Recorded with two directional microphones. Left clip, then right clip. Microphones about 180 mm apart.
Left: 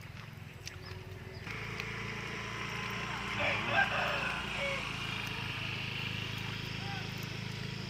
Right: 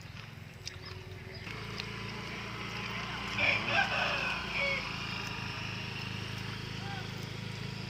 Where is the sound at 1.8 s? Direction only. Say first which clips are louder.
Left 1 dB; 60° right (ahead or behind).